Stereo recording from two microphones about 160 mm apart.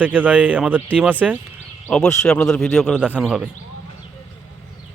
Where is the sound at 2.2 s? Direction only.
5° left (ahead or behind).